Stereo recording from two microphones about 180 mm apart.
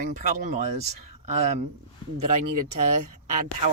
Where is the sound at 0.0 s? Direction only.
45° right (ahead or behind).